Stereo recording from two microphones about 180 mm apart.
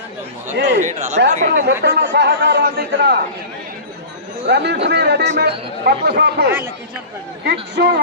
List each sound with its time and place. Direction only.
0.5 s speech: 70° right (ahead or behind)
0.8 s speech: 40° right (ahead or behind)
1.6 s speech: 70° right (ahead or behind)
4.4 s speech: 70° right (ahead or behind)